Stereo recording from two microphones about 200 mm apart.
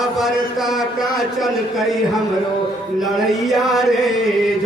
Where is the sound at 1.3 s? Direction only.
Centre (ahead or behind).